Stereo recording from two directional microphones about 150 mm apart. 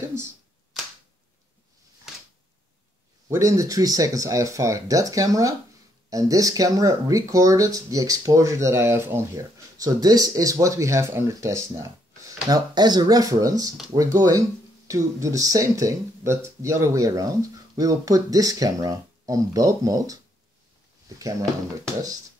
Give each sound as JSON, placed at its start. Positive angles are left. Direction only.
{"t": 3.3, "sound": "speech", "side_deg": -20}
{"t": 21.2, "sound": "speech", "side_deg": -25}